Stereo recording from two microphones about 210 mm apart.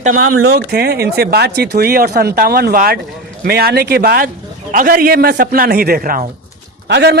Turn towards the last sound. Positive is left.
turn(degrees=-55)  # may be behind; listen again after turning